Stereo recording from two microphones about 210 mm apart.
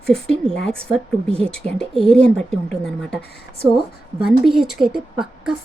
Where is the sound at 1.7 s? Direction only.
Centre (ahead or behind).